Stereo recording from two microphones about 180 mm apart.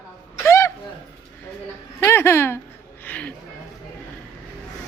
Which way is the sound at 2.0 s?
15° left (ahead or behind).